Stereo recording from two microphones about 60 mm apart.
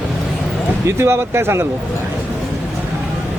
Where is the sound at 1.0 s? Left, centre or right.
Right.